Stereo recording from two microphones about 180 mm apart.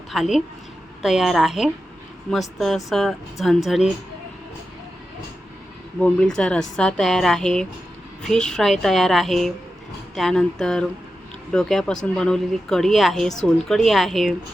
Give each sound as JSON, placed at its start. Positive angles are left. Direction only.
{"t": 0.1, "sound": "speech", "side_deg": 0}
{"t": 6.0, "sound": "speech", "side_deg": 5}